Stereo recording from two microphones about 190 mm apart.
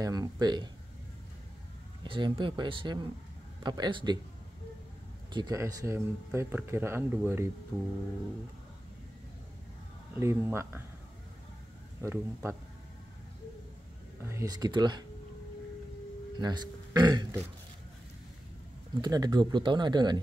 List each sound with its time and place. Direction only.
0.0 s speech: 20° right (ahead or behind)
2.0 s speech: 25° right (ahead or behind)
5.3 s speech: 20° right (ahead or behind)
10.1 s speech: 15° right (ahead or behind)
12.0 s speech: 15° right (ahead or behind)
14.2 s speech: 15° right (ahead or behind)
16.3 s a man's voice: 20° right (ahead or behind)
18.9 s speech: 20° right (ahead or behind)